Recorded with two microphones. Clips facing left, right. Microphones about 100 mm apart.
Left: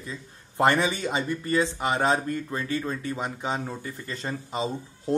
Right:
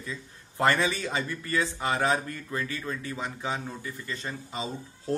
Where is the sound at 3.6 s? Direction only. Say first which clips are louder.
Left 3 dB; 35° left (ahead or behind).